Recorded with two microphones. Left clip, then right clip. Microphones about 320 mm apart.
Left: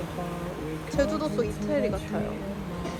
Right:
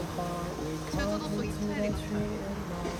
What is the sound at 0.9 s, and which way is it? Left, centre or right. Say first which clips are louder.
Music: left 8 dB; centre.